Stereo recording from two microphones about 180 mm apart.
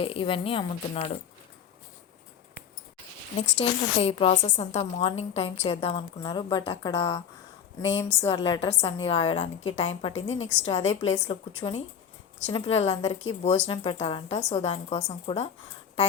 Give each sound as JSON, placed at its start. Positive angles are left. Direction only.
{"t": 0.0, "sound": "a woman's voice", "side_deg": 30}
{"t": 3.6, "sound": "a woman's voice", "side_deg": 35}
{"t": 10.1, "sound": "a woman's voice", "side_deg": 90}
{"t": 10.4, "sound": "a woman's voice", "side_deg": 35}
{"t": 13.7, "sound": "a woman's voice", "side_deg": 30}